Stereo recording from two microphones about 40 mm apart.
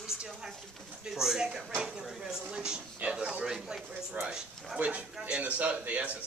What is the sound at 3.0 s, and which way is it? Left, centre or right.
Speech, right.